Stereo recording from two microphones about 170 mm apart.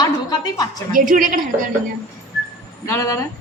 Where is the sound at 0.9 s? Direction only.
55° right (ahead or behind).